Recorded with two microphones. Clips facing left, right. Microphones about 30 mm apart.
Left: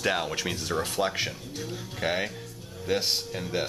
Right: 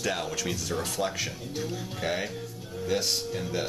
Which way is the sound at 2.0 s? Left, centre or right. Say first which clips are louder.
Left 3 dB; centre.